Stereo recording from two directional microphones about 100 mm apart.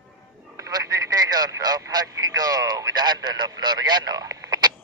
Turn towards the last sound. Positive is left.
turn(degrees=-40)  # may be behind; listen again after turning